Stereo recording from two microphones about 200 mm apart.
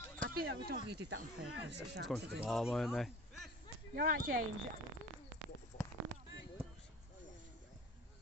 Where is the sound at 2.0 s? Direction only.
5° right (ahead or behind).